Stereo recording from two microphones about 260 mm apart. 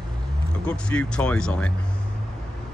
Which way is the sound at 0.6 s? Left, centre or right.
Centre.